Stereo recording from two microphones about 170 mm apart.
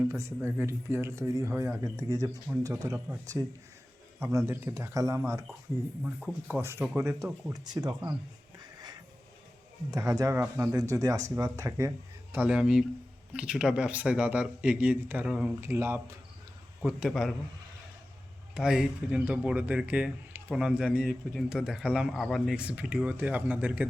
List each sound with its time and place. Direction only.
0.1 s speech: 15° right (ahead or behind)
6.1 s speech: centre (ahead or behind)
6.6 s speech: 15° right (ahead or behind)
8.5 s music: 25° right (ahead or behind)
9.9 s speech: 20° right (ahead or behind)
16.8 s speech: centre (ahead or behind)
18.5 s speech: 5° right (ahead or behind)